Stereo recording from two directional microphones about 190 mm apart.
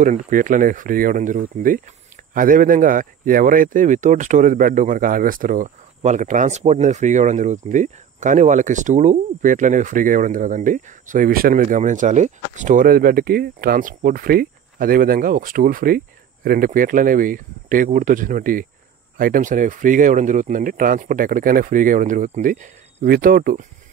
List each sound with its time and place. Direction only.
0.0 s speech: 40° right (ahead or behind)